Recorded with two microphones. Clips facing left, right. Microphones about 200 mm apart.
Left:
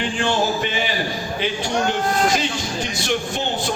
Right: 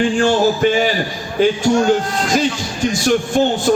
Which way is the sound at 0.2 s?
45° right (ahead or behind).